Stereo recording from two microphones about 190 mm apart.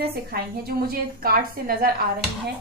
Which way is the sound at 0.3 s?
55° right (ahead or behind).